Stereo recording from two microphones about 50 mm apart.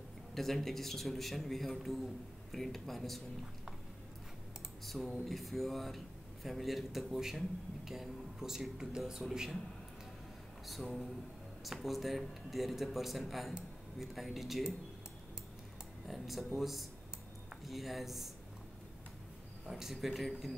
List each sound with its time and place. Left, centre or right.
0.3 s speech: centre
4.8 s speech: centre
10.7 s speech: centre
16.1 s speech: centre
19.7 s speech: centre